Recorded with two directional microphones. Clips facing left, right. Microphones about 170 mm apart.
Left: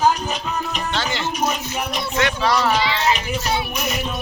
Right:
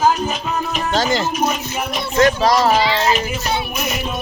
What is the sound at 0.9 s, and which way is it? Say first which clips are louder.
A child's voice: right 9 dB; 40° right (ahead or behind).